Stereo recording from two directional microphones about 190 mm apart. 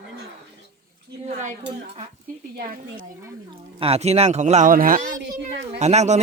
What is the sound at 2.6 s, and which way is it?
Speech, 50° right (ahead or behind).